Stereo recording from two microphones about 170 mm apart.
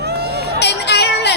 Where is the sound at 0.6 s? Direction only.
80° left.